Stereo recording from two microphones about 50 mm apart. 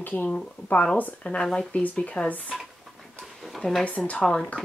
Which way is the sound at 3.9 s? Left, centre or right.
Left.